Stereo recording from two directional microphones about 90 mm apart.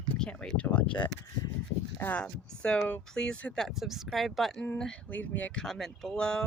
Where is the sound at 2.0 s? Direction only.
20° left (ahead or behind).